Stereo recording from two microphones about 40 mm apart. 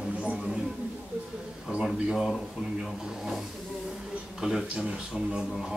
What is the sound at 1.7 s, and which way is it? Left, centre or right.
Speech, right.